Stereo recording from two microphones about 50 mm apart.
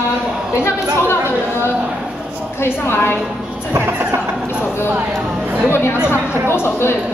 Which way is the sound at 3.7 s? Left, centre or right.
Right.